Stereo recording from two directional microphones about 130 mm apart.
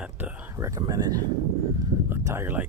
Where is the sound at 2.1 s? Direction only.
20° right (ahead or behind).